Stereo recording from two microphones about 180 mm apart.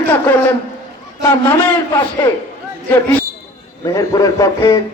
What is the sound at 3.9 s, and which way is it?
Speech, 20° left (ahead or behind).